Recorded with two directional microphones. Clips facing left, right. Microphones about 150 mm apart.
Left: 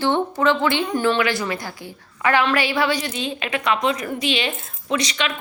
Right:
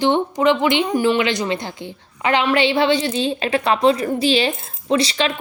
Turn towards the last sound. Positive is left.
turn(degrees=-30)  # may be behind; listen again after turning